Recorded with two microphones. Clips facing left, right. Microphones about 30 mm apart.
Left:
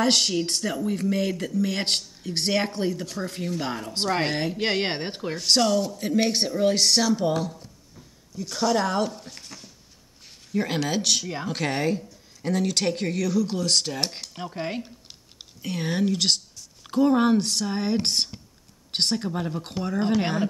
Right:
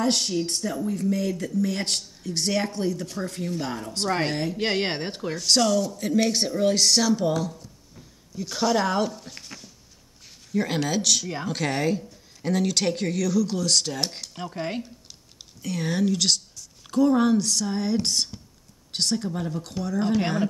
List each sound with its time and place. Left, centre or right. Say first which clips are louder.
0.0 s speech: left 2 dB; left
4.6 s speech: right 1 dB; centre
4.8 s speech: even; centre
5.5 s speech: even; centre
7.3 s speech: even; left
8.4 s speech: even; centre
10.5 s speech: even; centre
14.3 s speech: even; centre
15.6 s speech: even; centre
19.6 s speech: even; left
20.2 s speech: even; centre